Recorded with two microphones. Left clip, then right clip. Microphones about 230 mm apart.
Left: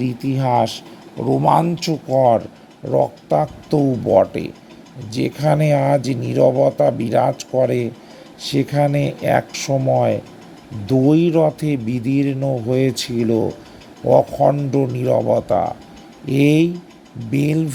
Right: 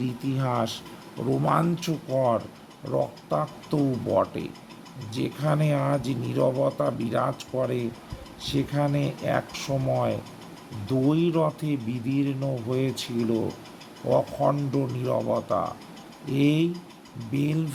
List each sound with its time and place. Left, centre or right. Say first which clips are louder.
0.0 s speech: left 9 dB; centre